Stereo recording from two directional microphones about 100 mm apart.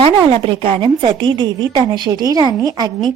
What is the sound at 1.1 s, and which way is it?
Speech, 50° right (ahead or behind).